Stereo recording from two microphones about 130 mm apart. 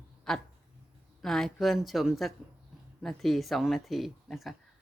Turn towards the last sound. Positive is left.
turn(degrees=0)  # may be behind; listen again after turning